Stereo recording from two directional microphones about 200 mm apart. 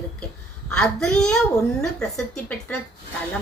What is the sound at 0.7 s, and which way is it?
A woman's voice, 5° left (ahead or behind).